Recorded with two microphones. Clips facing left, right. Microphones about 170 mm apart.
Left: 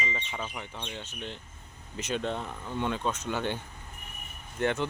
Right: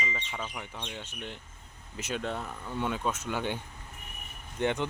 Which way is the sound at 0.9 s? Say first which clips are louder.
Left 1 dB; 10° right (ahead or behind).